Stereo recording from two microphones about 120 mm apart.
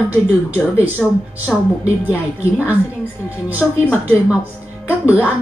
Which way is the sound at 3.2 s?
20° left (ahead or behind).